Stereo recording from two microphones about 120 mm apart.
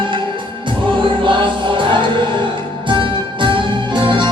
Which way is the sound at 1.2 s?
45° right (ahead or behind).